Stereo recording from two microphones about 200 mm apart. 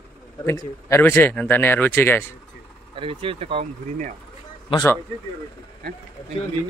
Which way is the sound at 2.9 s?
25° right (ahead or behind).